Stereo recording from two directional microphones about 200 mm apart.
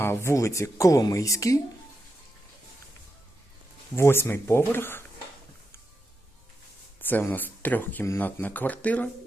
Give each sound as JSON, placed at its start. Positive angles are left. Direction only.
{"t": 0.0, "sound": "speech", "side_deg": 10}
{"t": 3.9, "sound": "speech", "side_deg": 10}
{"t": 7.0, "sound": "speech", "side_deg": 10}